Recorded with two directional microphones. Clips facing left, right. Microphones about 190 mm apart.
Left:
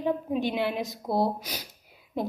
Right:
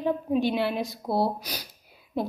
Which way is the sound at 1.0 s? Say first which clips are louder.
Even; 5° right (ahead or behind).